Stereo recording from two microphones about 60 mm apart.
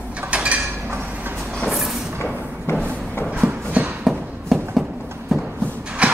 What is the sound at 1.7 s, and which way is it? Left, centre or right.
Vehicle, centre.